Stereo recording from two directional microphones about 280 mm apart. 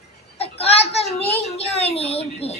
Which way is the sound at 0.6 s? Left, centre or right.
Left.